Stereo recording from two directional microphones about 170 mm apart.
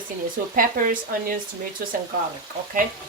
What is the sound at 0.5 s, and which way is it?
Speech, 55° right (ahead or behind).